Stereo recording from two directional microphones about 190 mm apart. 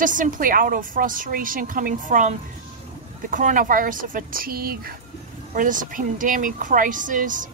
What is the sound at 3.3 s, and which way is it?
A woman's voice, 45° right (ahead or behind).